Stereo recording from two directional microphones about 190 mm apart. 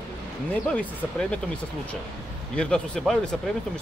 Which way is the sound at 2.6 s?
5° left (ahead or behind).